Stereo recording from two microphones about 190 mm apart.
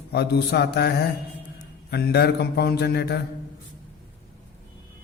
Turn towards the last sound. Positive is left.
turn(degrees=60)  # may be behind; listen again after turning